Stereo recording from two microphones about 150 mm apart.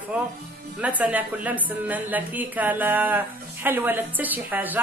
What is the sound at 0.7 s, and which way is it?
A woman's voice, 10° right (ahead or behind).